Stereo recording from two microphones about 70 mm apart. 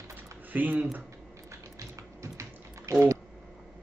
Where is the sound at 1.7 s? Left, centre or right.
Right.